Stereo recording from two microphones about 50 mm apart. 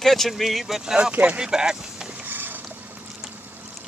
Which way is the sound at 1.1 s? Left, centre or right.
Right.